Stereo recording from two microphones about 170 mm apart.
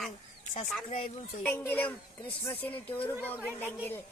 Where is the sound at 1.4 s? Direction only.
10° left (ahead or behind).